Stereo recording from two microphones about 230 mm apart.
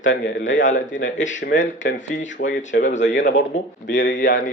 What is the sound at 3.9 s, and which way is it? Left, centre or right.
Speech, left.